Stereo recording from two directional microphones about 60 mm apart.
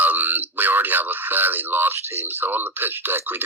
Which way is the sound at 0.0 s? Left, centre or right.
Right.